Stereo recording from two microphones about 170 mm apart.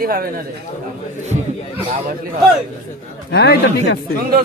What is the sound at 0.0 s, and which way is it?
Speech, 60° right (ahead or behind).